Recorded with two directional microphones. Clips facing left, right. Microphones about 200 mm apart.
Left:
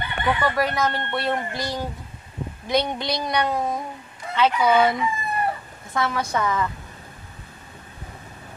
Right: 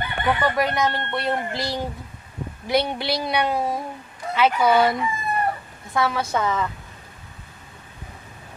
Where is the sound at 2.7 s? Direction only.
5° right (ahead or behind).